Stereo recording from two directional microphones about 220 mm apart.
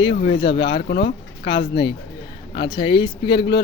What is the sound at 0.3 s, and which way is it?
Speech, 20° left (ahead or behind).